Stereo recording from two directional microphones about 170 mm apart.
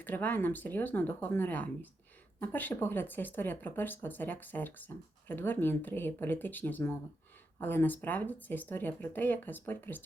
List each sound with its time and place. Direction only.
0.0 s speech: 10° left (ahead or behind)